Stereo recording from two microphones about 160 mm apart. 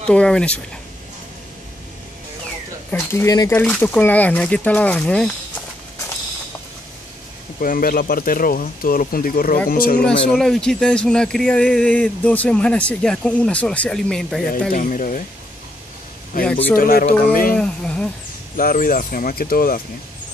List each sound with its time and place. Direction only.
0.1 s speech: 5° left (ahead or behind)
2.9 s speech: 15° left (ahead or behind)
7.6 s speech: 65° left (ahead or behind)
10.0 s speech: centre (ahead or behind)
14.7 s speech: 55° left (ahead or behind)
16.3 s speech: 60° left (ahead or behind)
17.6 s speech: 5° left (ahead or behind)
18.6 s speech: 60° left (ahead or behind)